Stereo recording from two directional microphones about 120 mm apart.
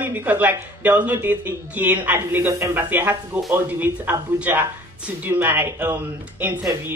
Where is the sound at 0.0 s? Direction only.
15° right (ahead or behind).